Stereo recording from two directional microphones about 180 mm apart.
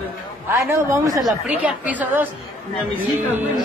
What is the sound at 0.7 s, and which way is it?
Speech, 15° right (ahead or behind).